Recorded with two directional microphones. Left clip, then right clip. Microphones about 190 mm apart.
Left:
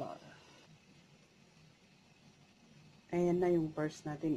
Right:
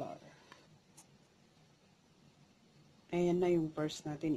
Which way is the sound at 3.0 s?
25° right (ahead or behind).